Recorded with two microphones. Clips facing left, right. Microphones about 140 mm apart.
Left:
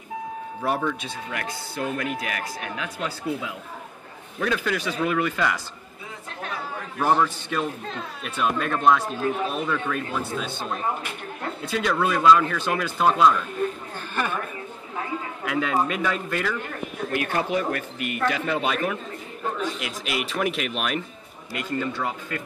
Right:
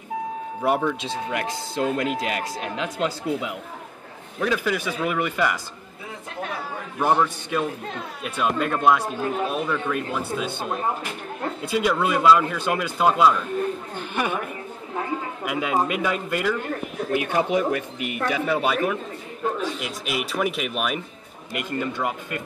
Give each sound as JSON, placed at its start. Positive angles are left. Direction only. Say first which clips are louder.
{"t": 0.6, "sound": "speech", "louder": "right 3 dB", "side_deg": -15}
{"t": 4.4, "sound": "speech", "louder": "right 2 dB", "side_deg": -5}
{"t": 7.0, "sound": "speech", "louder": "right 1 dB", "side_deg": -15}
{"t": 21.5, "sound": "speech", "louder": "even", "side_deg": -15}